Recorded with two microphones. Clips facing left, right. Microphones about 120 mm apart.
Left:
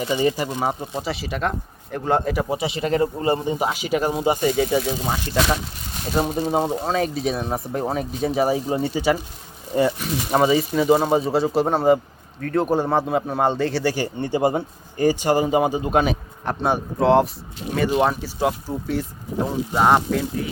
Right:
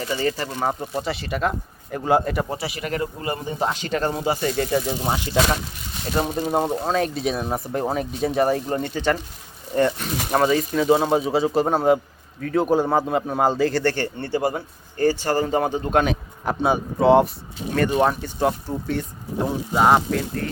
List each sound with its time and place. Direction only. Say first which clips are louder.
0.0 s speech: left 3 dB; 15° left (ahead or behind)
0.7 s a man's voice: right 1 dB; centre (ahead or behind)
2.5 s speech: left 5 dB; 20° left (ahead or behind)
3.6 s speech: left 1 dB; 10° left (ahead or behind)
4.4 s a man's voice: left 2 dB; 5° left (ahead or behind)
6.1 s a man's voice: left 1 dB; 5° left (ahead or behind)